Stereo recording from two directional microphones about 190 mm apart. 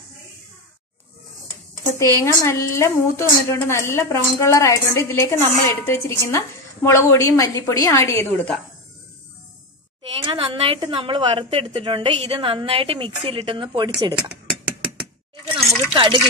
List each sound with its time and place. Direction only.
2.0 s a woman's voice: 15° left (ahead or behind)
10.0 s a woman's voice: 25° right (ahead or behind)
15.9 s a sound: 25° right (ahead or behind)